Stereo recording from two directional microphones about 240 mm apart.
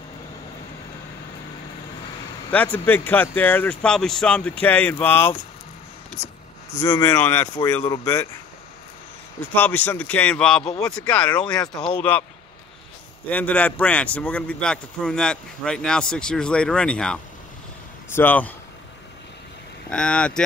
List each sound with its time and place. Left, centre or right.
2.5 s speech: centre
6.8 s speech: centre
9.5 s a man's voice: centre
11.6 s speech: left
12.0 s speech: centre
13.3 s a man's voice: centre
19.9 s a man's voice: centre